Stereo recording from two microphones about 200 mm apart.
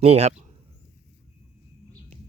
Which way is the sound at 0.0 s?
30° right (ahead or behind).